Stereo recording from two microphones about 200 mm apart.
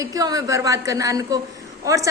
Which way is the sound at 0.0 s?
15° right (ahead or behind).